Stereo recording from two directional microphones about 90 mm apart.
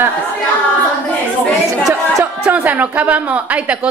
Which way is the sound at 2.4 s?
15° right (ahead or behind).